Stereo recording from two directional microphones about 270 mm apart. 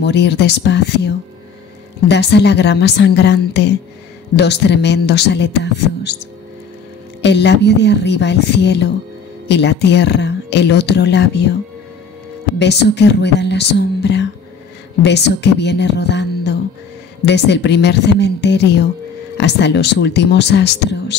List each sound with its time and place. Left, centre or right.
0.0 s speech: left
7.2 s speech: left
12.5 s speech: left